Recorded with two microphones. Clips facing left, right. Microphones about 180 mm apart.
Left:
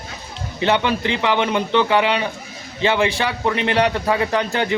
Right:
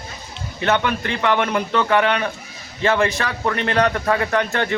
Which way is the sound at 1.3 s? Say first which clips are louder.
Left 1 dB; 5° left (ahead or behind).